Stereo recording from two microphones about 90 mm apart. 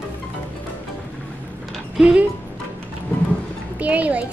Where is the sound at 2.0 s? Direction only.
10° right (ahead or behind).